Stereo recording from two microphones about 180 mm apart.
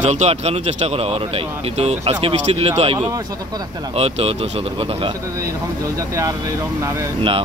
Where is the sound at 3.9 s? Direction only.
35° right (ahead or behind).